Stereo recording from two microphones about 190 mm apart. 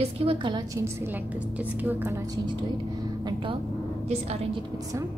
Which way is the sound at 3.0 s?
20° right (ahead or behind).